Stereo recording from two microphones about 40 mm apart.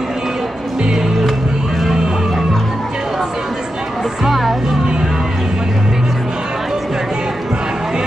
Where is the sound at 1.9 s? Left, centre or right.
Centre.